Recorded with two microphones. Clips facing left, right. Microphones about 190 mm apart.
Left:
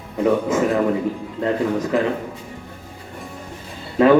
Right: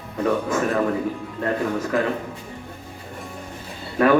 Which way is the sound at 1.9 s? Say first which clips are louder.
Left 2 dB; 20° left (ahead or behind).